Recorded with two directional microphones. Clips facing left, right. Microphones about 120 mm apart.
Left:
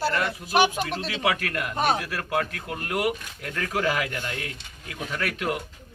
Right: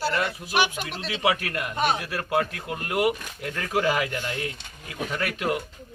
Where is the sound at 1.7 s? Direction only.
40° left (ahead or behind).